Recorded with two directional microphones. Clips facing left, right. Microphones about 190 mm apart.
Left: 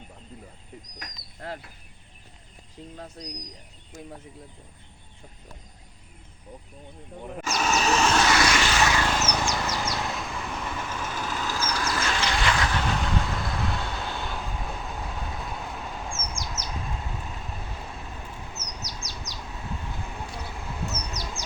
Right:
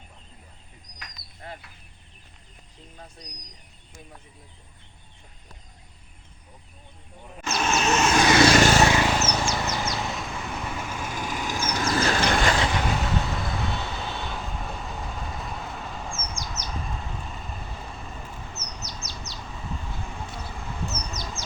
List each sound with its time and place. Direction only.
0.9 s bird: 45° left (ahead or behind)
7.4 s vehicle: centre (ahead or behind)
8.4 s vehicle: 40° right (ahead or behind)
9.0 s bird: 5° right (ahead or behind)
9.9 s vehicle: centre (ahead or behind); by 11.9 s 20° right (ahead or behind)
11.9 s vehicle: 30° right (ahead or behind)
12.1 s a sound: 50° right (ahead or behind)
12.7 s vehicle: 10° right (ahead or behind)
19.4 s a sound: centre (ahead or behind)